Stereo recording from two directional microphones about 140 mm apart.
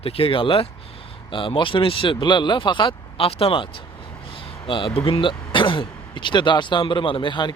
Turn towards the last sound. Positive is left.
turn(degrees=35)  # may be behind; listen again after turning